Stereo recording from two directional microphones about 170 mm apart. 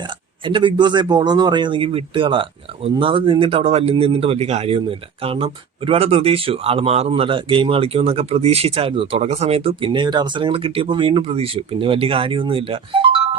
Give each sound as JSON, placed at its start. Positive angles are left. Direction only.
{"t": 0.0, "sound": "speech", "side_deg": -30}